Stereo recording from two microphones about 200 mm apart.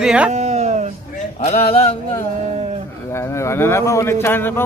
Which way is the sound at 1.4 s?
30° left (ahead or behind).